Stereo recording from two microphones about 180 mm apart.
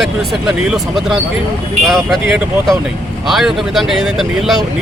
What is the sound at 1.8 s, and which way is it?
Speech, centre (ahead or behind).